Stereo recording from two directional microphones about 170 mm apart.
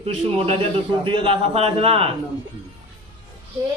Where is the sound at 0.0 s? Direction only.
35° right (ahead or behind).